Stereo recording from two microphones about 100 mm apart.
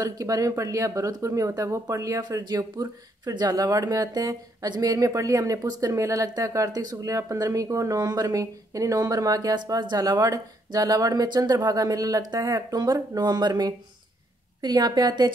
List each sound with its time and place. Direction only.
0.0 s a woman's voice: 35° right (ahead or behind)